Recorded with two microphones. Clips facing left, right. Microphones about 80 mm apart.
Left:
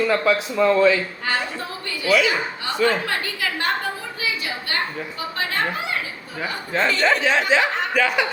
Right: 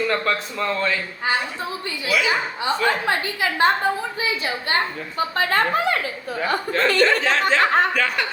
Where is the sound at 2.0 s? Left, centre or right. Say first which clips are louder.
Left 3 dB; centre.